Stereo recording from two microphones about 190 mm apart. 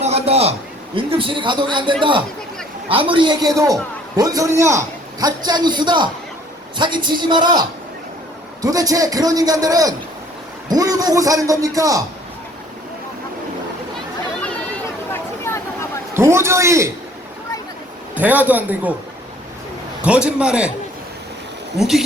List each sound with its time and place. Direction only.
0.0 s a man's voice: 35° right (ahead or behind)
8.6 s a man's voice: 20° right (ahead or behind)
15.1 s a sound: 15° left (ahead or behind)
16.1 s a man's voice: 15° right (ahead or behind)
18.1 s a man's voice: 10° right (ahead or behind)
20.0 s a man's voice: 5° right (ahead or behind)
21.8 s a man's voice: centre (ahead or behind)